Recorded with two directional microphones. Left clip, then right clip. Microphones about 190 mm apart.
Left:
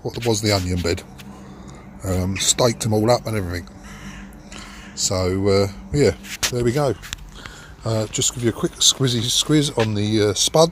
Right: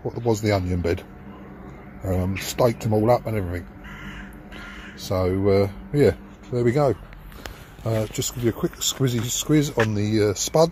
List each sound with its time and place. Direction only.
0.0 s speech: 5° left (ahead or behind)
2.0 s speech: 10° left (ahead or behind)
4.9 s speech: 5° left (ahead or behind)